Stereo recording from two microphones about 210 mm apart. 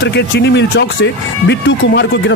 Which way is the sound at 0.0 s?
55° left (ahead or behind).